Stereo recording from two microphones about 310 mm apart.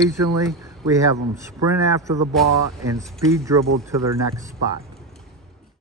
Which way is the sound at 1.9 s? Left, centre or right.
Centre.